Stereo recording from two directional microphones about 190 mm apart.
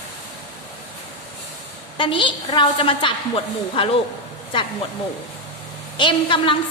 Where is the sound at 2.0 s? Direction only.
25° left (ahead or behind).